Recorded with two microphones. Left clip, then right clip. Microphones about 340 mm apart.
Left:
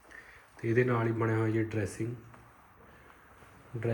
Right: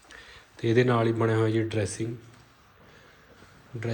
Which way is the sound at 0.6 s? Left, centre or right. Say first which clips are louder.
Right 6 dB; centre.